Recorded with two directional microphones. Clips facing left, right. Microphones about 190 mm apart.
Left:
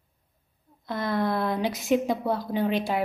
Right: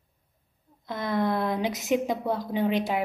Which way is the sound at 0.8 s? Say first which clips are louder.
Even; 20° right (ahead or behind).